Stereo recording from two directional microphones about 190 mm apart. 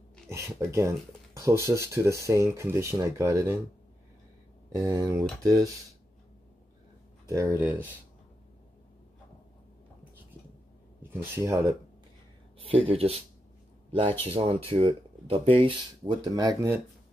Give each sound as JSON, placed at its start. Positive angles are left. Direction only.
{"t": 0.3, "sound": "speech", "side_deg": -15}
{"t": 4.7, "sound": "speech", "side_deg": -15}
{"t": 7.2, "sound": "speech", "side_deg": -15}
{"t": 11.0, "sound": "speech", "side_deg": -10}
{"t": 12.6, "sound": "speech", "side_deg": -30}
{"t": 14.2, "sound": "speech", "side_deg": -30}